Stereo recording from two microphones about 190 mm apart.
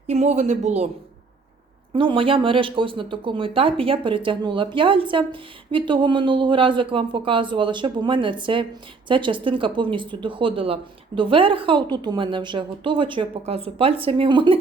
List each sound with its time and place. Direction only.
0.1 s speech: 35° right (ahead or behind)
1.9 s speech: 25° right (ahead or behind)